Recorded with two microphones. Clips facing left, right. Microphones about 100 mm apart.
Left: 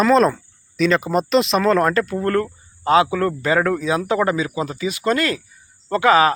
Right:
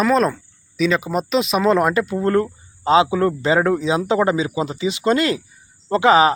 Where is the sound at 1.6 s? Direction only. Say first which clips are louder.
Even; 15° right (ahead or behind).